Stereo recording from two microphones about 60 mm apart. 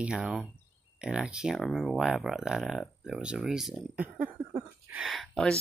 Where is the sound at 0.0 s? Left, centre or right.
Centre.